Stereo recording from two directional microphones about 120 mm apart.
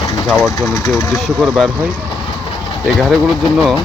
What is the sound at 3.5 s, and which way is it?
Speech, 5° right (ahead or behind).